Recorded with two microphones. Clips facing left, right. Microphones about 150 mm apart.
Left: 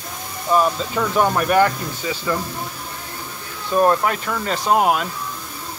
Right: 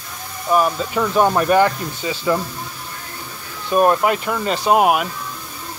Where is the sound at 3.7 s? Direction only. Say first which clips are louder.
Right 2 dB; 15° right (ahead or behind).